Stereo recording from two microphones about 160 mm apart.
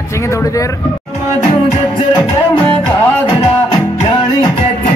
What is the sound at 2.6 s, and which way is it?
Speech, 10° left (ahead or behind).